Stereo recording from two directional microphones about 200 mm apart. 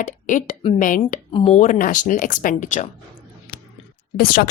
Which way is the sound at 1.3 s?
30° left (ahead or behind).